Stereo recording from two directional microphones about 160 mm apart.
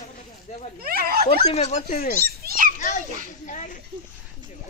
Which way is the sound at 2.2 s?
65° right (ahead or behind).